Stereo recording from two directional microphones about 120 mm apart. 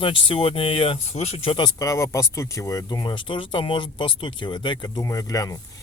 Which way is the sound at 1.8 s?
25° left (ahead or behind).